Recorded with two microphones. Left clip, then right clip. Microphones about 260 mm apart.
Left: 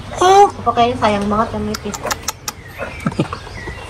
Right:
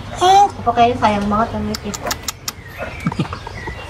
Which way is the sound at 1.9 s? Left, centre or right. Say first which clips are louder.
Left 2 dB; centre.